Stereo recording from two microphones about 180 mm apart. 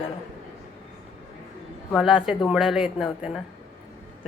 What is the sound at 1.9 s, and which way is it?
Speech, centre (ahead or behind).